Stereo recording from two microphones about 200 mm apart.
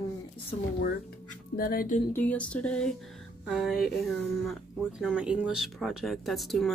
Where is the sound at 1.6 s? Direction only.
45° left (ahead or behind).